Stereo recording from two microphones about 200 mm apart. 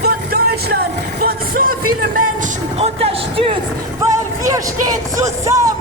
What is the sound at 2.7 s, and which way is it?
Speech, 30° right (ahead or behind).